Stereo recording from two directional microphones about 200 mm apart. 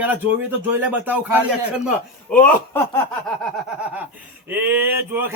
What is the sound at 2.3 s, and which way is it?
Speech, 5° left (ahead or behind).